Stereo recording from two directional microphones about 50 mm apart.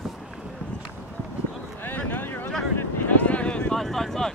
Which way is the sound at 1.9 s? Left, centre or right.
Left.